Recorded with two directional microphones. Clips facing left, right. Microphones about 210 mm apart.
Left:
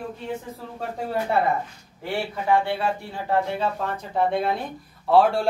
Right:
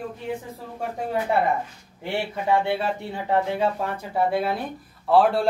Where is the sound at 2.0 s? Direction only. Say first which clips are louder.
Even; 20° right (ahead or behind); by 5.5 s centre (ahead or behind).